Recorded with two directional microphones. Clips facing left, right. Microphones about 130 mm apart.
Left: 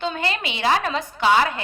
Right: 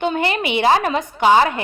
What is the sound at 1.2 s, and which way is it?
Music, 20° right (ahead or behind).